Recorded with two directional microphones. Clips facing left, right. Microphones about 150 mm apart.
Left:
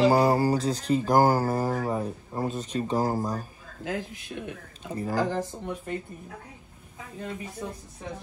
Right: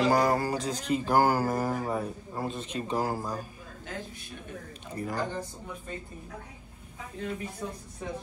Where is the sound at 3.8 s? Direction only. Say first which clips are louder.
Left 8 dB; 90° left.